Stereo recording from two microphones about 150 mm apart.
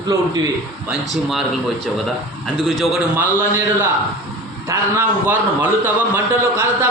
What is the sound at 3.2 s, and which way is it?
A man's voice, 15° right (ahead or behind).